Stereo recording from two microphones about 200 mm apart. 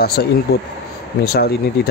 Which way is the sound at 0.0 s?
50° left (ahead or behind).